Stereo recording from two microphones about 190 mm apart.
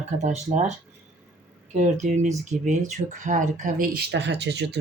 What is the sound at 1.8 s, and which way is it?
Speech, 40° right (ahead or behind).